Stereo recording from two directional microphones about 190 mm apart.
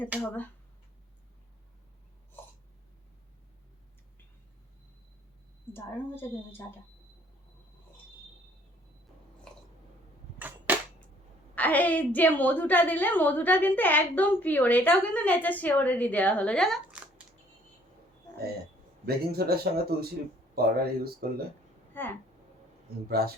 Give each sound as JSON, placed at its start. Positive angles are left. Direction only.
{"t": 5.7, "sound": "a woman's voice", "side_deg": 10}
{"t": 10.3, "sound": "cap gun", "side_deg": -10}
{"t": 11.5, "sound": "a woman's voice", "side_deg": 10}
{"t": 19.0, "sound": "speech", "side_deg": -55}
{"t": 22.0, "sound": "speech", "side_deg": 10}
{"t": 23.0, "sound": "speech", "side_deg": -55}